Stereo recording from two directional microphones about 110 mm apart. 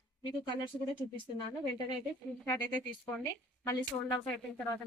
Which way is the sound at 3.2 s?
30° left (ahead or behind).